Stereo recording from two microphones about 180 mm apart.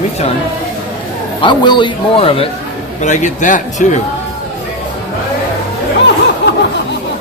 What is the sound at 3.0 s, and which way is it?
Speech, 45° left (ahead or behind).